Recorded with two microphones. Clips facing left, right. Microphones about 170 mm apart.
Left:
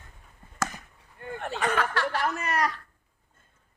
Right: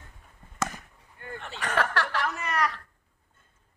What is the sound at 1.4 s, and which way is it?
Speech, 50° left (ahead or behind).